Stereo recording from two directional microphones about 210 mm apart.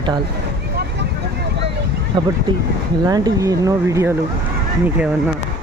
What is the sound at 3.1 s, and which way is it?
Speech, 15° right (ahead or behind).